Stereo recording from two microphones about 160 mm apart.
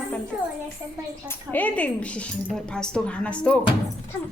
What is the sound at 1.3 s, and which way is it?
Speech, 10° left (ahead or behind).